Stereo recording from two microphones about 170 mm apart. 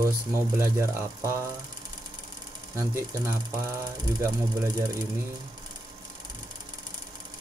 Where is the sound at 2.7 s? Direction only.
15° right (ahead or behind).